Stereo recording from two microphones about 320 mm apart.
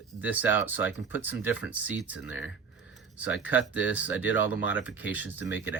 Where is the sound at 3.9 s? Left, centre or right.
Centre.